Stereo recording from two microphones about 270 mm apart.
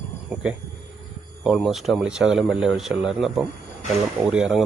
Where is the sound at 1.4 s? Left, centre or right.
Centre.